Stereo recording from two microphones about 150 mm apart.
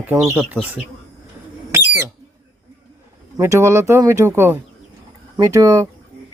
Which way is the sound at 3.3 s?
20° right (ahead or behind).